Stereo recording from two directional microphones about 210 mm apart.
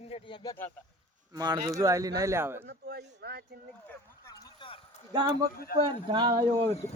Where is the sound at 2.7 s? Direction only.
50° right (ahead or behind).